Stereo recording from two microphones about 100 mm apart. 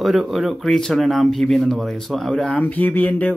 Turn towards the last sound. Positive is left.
turn(degrees=15)  # may be behind; listen again after turning